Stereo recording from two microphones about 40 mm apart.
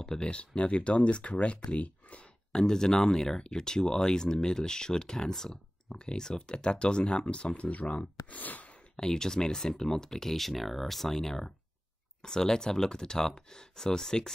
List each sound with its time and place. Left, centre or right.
0.0 s speech: centre
0.3 s speech: left
2.5 s speech: centre; by 8.0 s left
8.3 s a sound: left
8.9 s speech: centre